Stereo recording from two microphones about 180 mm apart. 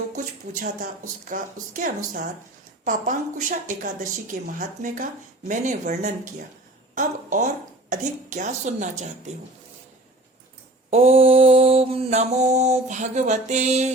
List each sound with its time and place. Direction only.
0.5 s a woman's voice: 45° right (ahead or behind)
10.9 s mantra: 35° right (ahead or behind)